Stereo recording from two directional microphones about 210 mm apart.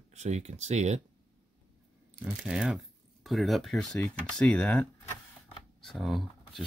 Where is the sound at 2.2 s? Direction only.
5° right (ahead or behind).